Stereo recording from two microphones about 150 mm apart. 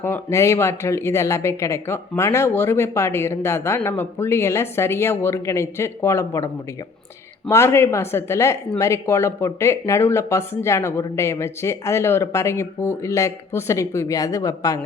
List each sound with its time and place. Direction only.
0.0 s speech: 15° left (ahead or behind)